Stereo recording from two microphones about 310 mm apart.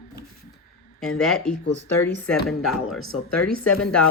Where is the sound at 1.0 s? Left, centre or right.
Centre.